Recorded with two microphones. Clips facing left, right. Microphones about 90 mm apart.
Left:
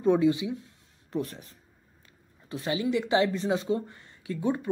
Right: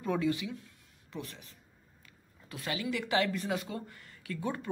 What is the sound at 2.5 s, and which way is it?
Speech, 25° left (ahead or behind).